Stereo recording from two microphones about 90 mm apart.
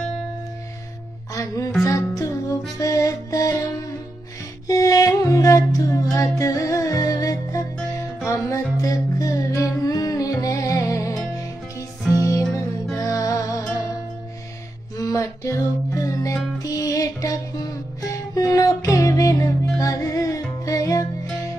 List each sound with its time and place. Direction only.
1.3 s music: 40° left (ahead or behind)
4.6 s music: 40° left (ahead or behind)
15.0 s music: 35° left (ahead or behind)